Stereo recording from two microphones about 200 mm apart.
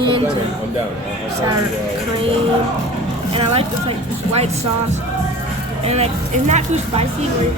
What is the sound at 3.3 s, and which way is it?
Speech, 30° right (ahead or behind).